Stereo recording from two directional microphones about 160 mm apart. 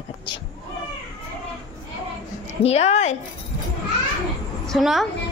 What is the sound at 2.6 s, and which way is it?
Speech, 40° left (ahead or behind).